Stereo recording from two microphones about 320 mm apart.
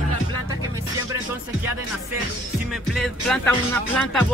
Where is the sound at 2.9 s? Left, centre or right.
Centre.